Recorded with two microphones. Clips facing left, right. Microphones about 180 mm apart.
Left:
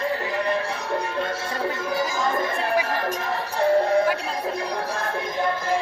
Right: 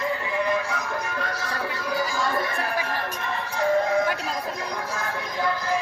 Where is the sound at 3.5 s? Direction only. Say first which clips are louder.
Left 3 dB; 35° left (ahead or behind).